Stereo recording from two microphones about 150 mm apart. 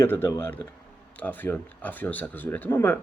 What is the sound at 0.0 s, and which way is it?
Speech, 15° left (ahead or behind).